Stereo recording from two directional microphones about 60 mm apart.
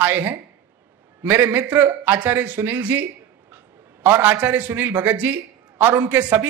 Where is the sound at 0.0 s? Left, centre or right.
Right.